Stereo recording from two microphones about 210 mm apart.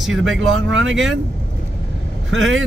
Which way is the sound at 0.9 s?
65° right (ahead or behind).